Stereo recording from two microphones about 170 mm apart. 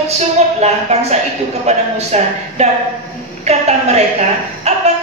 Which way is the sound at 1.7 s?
40° right (ahead or behind).